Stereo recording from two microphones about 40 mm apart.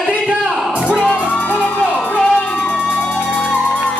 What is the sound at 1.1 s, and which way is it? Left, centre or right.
Music, left.